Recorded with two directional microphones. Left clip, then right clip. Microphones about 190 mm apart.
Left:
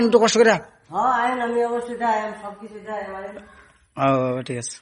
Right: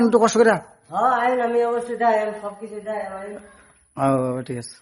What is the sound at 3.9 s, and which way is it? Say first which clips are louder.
Speech: left 1 dB; 15° right (ahead or behind).